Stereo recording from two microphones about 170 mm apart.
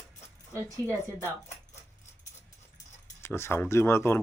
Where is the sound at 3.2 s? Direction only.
15° left (ahead or behind).